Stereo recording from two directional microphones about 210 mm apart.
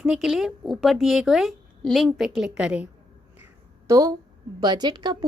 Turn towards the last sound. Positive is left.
turn(degrees=-20)  # may be behind; listen again after turning